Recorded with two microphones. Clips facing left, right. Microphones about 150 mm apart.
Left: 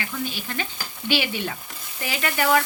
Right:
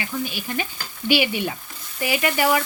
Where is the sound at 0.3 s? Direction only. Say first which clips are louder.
Right 2 dB; 15° right (ahead or behind).